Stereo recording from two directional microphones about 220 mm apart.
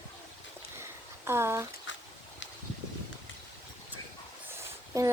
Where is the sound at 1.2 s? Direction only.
10° right (ahead or behind).